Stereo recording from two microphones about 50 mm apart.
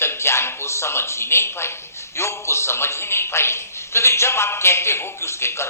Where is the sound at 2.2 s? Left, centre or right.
Left.